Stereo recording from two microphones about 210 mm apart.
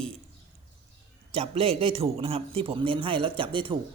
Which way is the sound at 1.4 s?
30° right (ahead or behind).